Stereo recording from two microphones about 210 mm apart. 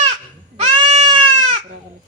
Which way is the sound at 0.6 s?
30° right (ahead or behind).